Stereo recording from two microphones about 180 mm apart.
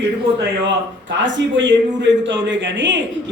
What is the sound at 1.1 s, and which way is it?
A man's voice, 90° right.